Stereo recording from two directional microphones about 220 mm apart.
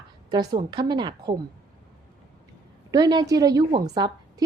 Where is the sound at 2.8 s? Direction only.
15° right (ahead or behind).